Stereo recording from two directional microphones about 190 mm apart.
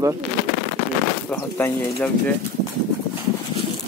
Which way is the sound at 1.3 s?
10° left (ahead or behind).